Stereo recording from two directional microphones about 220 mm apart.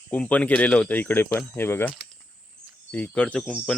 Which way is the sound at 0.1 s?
5° left (ahead or behind).